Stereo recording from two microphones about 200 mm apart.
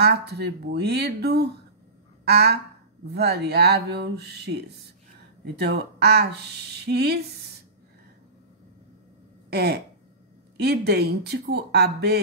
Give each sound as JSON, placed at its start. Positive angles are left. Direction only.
{"t": 0.0, "sound": "speech", "side_deg": -55}
{"t": 9.5, "sound": "speech", "side_deg": -55}